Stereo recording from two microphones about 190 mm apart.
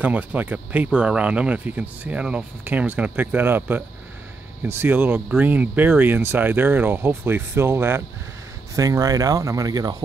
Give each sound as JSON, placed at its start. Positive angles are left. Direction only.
{"t": 0.0, "sound": "speech", "side_deg": -5}